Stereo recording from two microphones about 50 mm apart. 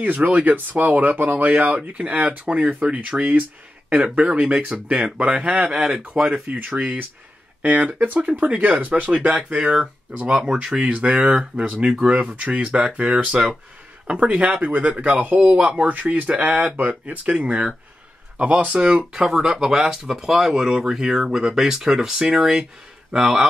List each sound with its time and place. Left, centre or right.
0.0 s speech: right
5.8 s speech: centre; by 9.4 s right
9.4 s speech: centre
10.9 s speech: right
18.8 s speech: centre